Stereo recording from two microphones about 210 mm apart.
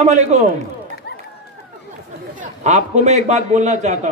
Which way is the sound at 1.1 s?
50° left (ahead or behind).